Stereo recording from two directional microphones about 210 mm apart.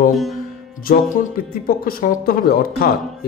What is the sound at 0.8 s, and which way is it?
Speech, 45° left (ahead or behind).